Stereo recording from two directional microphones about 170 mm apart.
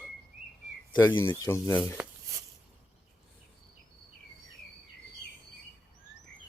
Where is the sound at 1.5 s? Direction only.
15° left (ahead or behind).